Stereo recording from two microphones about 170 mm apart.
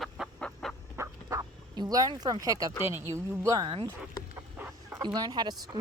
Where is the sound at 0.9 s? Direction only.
15° right (ahead or behind).